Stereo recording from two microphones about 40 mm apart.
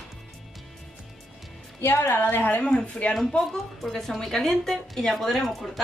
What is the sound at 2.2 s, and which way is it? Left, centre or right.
Speech, left.